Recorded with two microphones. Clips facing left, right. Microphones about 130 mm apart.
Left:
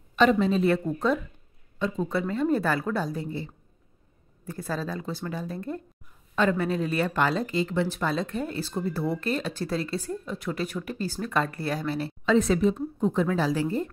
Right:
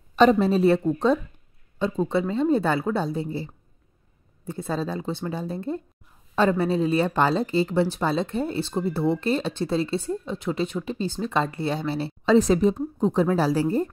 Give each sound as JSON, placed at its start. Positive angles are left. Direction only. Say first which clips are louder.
{"t": 0.1, "sound": "a woman's voice", "louder": "right 4 dB", "side_deg": -35}